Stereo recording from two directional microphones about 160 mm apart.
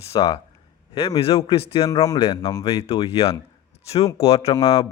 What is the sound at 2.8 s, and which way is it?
Speech, 40° left (ahead or behind).